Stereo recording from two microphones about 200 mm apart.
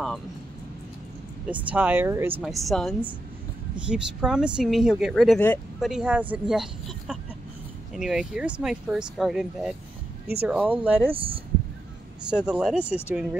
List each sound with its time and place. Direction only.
1.5 s speech: 5° right (ahead or behind)
2.4 s speech: centre (ahead or behind)
11.1 s speech: 25° right (ahead or behind)
12.3 s speech: 5° right (ahead or behind)